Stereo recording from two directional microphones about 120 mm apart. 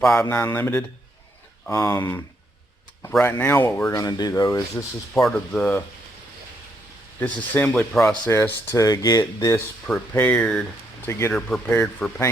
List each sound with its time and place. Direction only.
0.2 s speech: 20° left (ahead or behind)
5.1 s speech: 5° left (ahead or behind)
7.2 s speech: 15° left (ahead or behind)
8.3 s speech: 20° left (ahead or behind)
9.8 s speech: 10° left (ahead or behind)
11.0 s speech: 20° left (ahead or behind)